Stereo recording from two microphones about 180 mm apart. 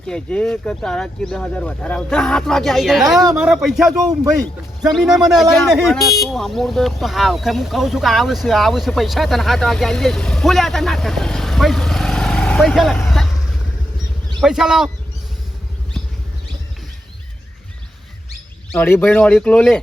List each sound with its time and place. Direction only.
0.1 s speech: 5° left (ahead or behind)
4.9 s speech: centre (ahead or behind)
13.1 s vehicle: centre (ahead or behind)
14.4 s speech: 5° right (ahead or behind)
18.7 s speech: 10° left (ahead or behind)